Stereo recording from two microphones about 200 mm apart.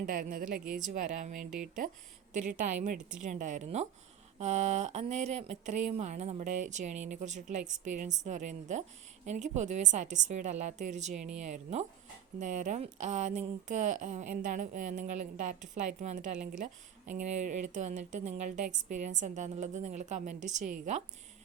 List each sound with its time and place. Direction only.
0.0 s speech: 45° right (ahead or behind)